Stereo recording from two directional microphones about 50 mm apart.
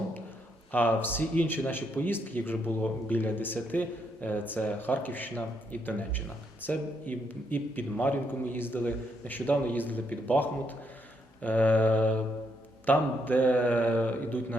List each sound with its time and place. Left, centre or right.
0.7 s speech: left